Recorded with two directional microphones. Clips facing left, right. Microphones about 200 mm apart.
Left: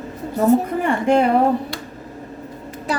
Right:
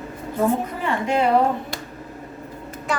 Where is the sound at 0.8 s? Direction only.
50° left (ahead or behind).